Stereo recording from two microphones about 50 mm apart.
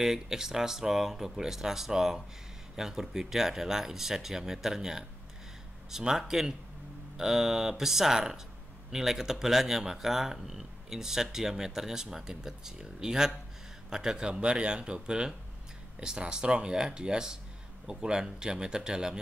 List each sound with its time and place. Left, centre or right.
0.0 s speech: centre